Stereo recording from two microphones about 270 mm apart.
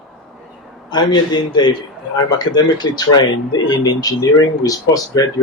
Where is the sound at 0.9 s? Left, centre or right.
Centre.